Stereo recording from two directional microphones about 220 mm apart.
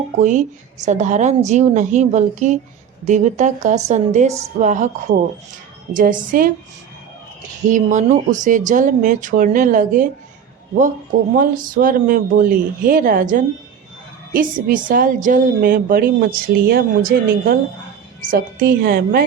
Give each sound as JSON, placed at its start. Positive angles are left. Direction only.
{"t": 0.2, "sound": "a woman's voice", "side_deg": -35}
{"t": 11.3, "sound": "a woman's voice", "side_deg": -40}